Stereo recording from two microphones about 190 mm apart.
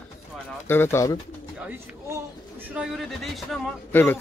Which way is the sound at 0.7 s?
10° left (ahead or behind).